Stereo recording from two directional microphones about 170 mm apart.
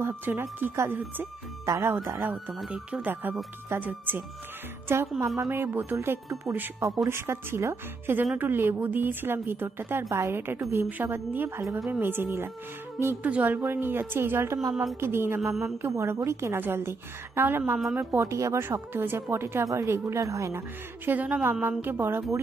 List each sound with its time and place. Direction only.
0.0 s speech: 10° right (ahead or behind)
2.3 s speech: 5° right (ahead or behind)
6.3 s speech: centre (ahead or behind)
6.6 s speech: 15° right (ahead or behind)